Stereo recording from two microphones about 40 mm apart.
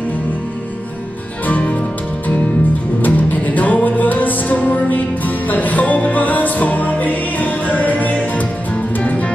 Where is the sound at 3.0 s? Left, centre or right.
Left.